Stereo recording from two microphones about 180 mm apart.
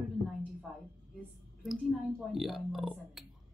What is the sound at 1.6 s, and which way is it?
Speech, centre (ahead or behind).